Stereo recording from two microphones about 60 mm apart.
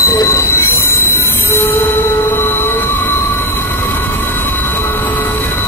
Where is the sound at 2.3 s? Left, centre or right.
Left.